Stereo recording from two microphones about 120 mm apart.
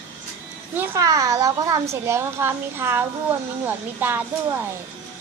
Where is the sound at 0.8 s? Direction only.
25° right (ahead or behind).